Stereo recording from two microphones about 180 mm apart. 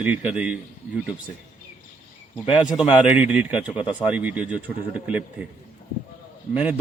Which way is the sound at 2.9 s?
5° right (ahead or behind).